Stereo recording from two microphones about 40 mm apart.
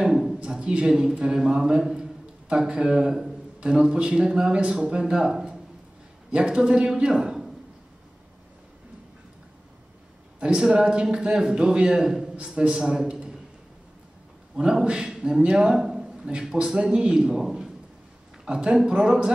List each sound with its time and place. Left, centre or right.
0.0 s a sound: centre
0.4 s a man's voice: right
10.4 s a man's voice: right
12.7 s a man's voice: centre
14.5 s a man's voice: centre